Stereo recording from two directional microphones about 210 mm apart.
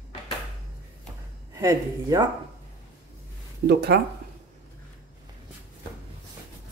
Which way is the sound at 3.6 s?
50° right (ahead or behind).